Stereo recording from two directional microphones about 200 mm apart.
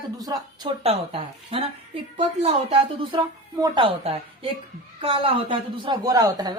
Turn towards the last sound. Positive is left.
turn(degrees=-20)  # may be behind; listen again after turning